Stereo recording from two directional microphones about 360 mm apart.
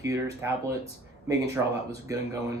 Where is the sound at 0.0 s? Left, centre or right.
Centre.